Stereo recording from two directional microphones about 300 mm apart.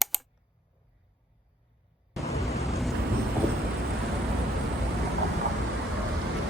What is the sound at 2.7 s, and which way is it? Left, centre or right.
Vehicle, centre.